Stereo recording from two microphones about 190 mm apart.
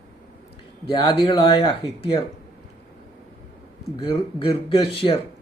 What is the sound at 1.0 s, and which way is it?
Speech, 25° left (ahead or behind).